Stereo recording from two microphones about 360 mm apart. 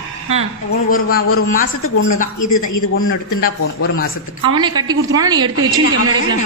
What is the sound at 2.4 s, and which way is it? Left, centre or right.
A man's voice, left.